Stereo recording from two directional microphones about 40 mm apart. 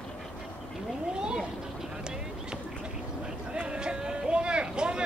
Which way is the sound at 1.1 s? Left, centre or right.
Right.